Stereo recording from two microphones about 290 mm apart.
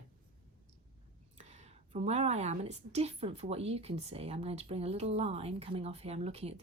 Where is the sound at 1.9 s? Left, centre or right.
Right.